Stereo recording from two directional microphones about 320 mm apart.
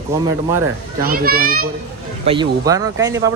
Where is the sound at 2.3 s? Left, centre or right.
Centre.